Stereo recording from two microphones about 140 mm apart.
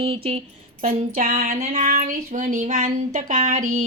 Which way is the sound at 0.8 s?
90° right.